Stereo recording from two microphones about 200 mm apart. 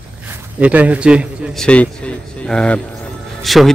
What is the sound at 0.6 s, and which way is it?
A man's voice, 5° right (ahead or behind).